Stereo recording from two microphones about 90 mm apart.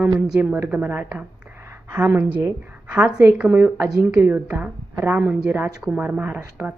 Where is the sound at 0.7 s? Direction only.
20° right (ahead or behind).